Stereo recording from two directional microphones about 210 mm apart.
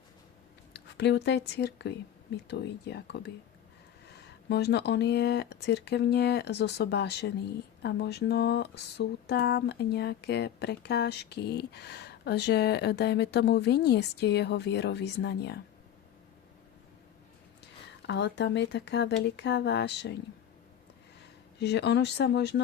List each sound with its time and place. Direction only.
0.7 s speech: 55° left (ahead or behind)
18.0 s speech: 55° left (ahead or behind)
21.6 s speech: 55° left (ahead or behind)